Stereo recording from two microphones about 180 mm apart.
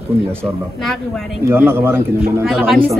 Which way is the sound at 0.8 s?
Centre (ahead or behind).